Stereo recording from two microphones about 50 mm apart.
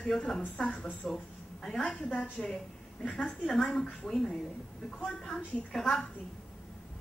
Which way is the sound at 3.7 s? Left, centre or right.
Centre.